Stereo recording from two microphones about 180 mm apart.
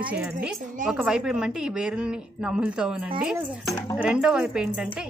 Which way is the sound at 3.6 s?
20° left (ahead or behind).